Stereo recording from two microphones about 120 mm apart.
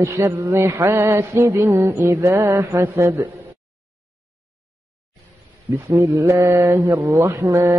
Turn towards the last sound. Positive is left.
turn(degrees=-25)  # may be behind; listen again after turning